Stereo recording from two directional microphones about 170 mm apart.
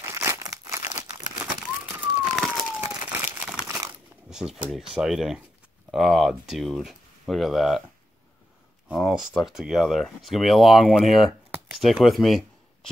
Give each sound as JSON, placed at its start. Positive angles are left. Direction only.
{"t": 0.0, "sound": "crumpling", "side_deg": -15}
{"t": 2.0, "sound": "police car", "side_deg": -10}
{"t": 2.8, "sound": "crumpling", "side_deg": -15}
{"t": 4.3, "sound": "speech", "side_deg": -5}
{"t": 8.8, "sound": "speech", "side_deg": 0}
{"t": 11.5, "sound": "a sound", "side_deg": -5}